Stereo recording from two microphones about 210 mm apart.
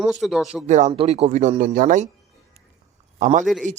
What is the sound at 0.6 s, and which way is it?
Speech, 35° right (ahead or behind).